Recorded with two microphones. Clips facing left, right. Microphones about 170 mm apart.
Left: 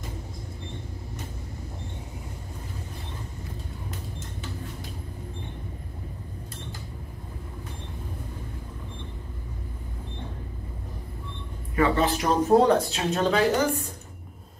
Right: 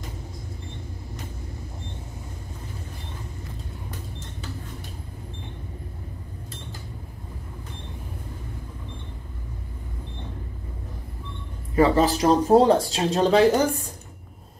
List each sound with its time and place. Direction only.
11.7 s speech: 35° right (ahead or behind)